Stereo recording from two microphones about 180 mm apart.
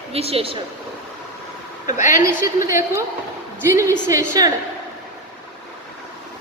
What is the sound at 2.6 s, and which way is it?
A woman's voice, 15° right (ahead or behind).